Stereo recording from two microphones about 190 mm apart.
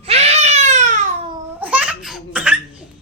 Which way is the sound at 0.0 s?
35° right (ahead or behind).